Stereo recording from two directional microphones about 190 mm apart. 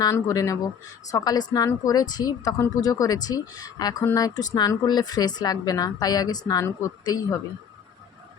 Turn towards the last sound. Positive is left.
turn(degrees=20)  # may be behind; listen again after turning